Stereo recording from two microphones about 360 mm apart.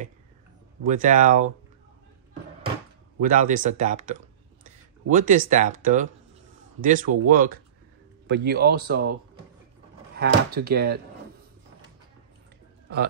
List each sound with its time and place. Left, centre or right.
0.8 s speech: right
3.2 s speech: right
10.1 s speech: right